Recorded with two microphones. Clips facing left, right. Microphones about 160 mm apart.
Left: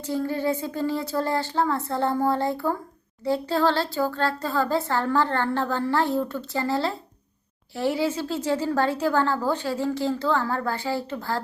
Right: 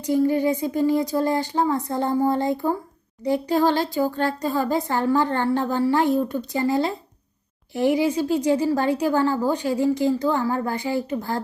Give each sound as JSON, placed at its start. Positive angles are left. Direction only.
{"t": 0.0, "sound": "speech", "side_deg": -15}